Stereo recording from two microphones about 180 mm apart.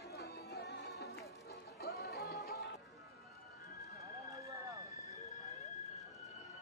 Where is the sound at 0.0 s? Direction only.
70° left (ahead or behind).